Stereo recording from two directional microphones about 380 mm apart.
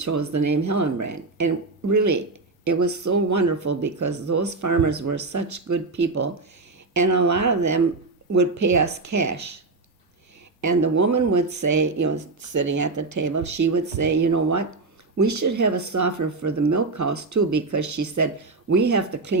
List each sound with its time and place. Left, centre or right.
0.0 s speech: right
10.6 s speech: right